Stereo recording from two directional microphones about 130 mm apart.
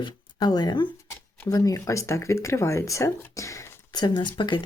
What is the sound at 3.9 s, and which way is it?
Speech, 35° left (ahead or behind).